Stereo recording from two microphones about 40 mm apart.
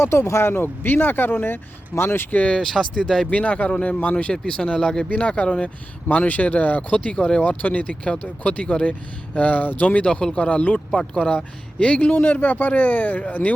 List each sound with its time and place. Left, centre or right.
0.0 s speech: left
2.0 s speech: left
2.6 s speech: centre
3.2 s speech: left
4.3 s speech: left
6.1 s speech: left
7.0 s speech: left
7.4 s speech: left
8.0 s speech: left
8.9 s speech: left
9.8 s speech: left
10.9 s speech: left
11.8 s speech: left
12.1 s speech: left